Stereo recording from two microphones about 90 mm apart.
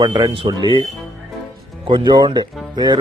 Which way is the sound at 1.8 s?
60° right (ahead or behind).